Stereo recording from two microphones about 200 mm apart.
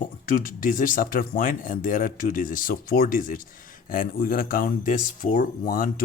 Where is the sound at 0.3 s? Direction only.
45° left (ahead or behind).